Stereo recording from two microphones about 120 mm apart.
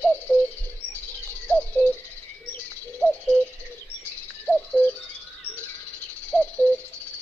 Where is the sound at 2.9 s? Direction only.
5° left (ahead or behind).